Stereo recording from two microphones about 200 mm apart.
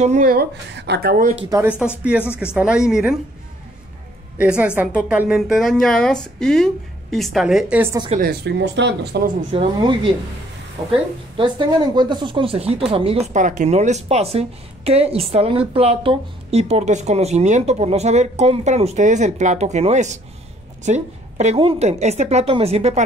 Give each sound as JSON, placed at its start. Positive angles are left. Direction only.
{"t": 0.0, "sound": "speech", "side_deg": -40}
{"t": 1.3, "sound": "a woman's voice", "side_deg": -10}
{"t": 4.4, "sound": "a woman's voice", "side_deg": -5}
{"t": 8.2, "sound": "speech", "side_deg": -55}
{"t": 9.5, "sound": "speech", "side_deg": -25}